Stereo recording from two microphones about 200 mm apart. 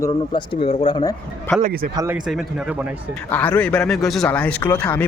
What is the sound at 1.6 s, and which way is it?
Speech, 40° right (ahead or behind).